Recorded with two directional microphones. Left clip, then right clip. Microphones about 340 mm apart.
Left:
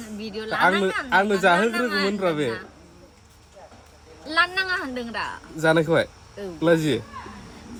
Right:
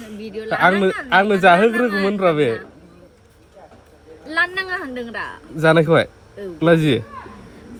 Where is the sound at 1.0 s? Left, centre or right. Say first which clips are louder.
Right 7 dB; centre.